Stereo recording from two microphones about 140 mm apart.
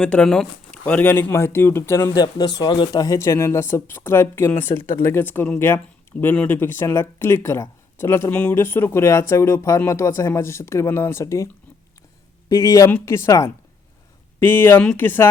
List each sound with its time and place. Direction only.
0.0 s speech: 5° left (ahead or behind); by 2.9 s 35° left (ahead or behind)
2.9 s speech: 20° left (ahead or behind)
12.5 s speech: 25° left (ahead or behind)